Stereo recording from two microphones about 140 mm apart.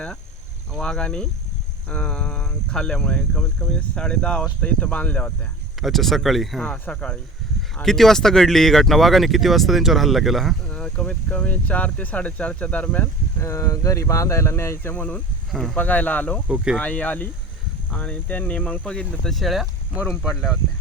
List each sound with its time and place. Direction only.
0.7 s speech: 5° left (ahead or behind)
13.4 s speech: 20° left (ahead or behind)
15.5 s speech: centre (ahead or behind)